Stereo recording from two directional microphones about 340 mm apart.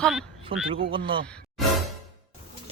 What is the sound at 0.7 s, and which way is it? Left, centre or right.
Speech, centre.